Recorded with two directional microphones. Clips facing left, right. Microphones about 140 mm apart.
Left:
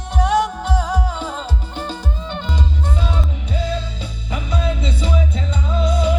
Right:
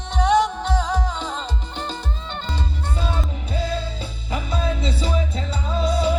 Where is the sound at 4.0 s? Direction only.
30° right (ahead or behind).